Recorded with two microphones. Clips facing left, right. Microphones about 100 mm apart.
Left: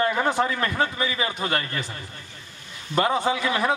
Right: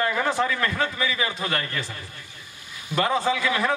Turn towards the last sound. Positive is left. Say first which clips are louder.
# even
turn(degrees=25)  # may be behind; listen again after turning